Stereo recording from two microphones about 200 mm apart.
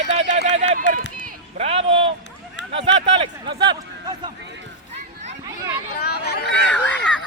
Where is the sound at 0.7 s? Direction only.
45° right (ahead or behind).